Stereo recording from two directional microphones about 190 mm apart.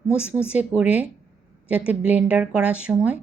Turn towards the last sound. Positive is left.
turn(degrees=-5)  # may be behind; listen again after turning